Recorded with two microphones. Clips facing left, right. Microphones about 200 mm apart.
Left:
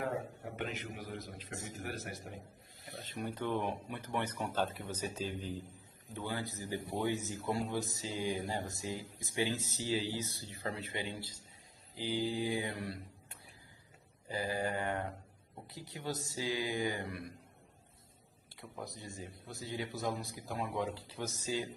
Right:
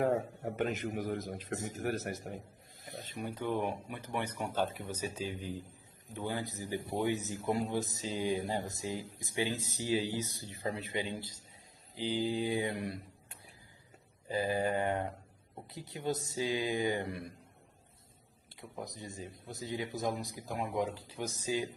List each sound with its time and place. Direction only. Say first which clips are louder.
0.0 s a man's voice: right 7 dB; 45° right (ahead or behind)
2.8 s a sound: right 2 dB; 45° right (ahead or behind)
3.2 s speech: right 1 dB; 10° right (ahead or behind)
14.3 s speech: right 4 dB; 20° right (ahead or behind)
18.5 s speech: right 2 dB; 15° right (ahead or behind)